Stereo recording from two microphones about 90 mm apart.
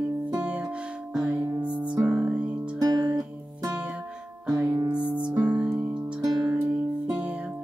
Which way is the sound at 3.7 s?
15° right (ahead or behind).